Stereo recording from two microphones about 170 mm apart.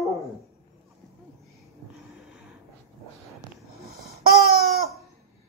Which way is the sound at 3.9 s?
60° right (ahead or behind).